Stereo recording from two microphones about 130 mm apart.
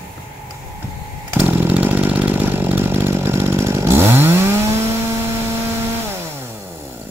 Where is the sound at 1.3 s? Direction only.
15° right (ahead or behind).